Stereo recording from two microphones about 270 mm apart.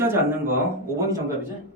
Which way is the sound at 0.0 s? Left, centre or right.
Centre.